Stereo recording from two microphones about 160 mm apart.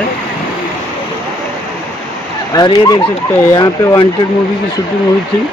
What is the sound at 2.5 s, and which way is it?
Speech, 25° left (ahead or behind).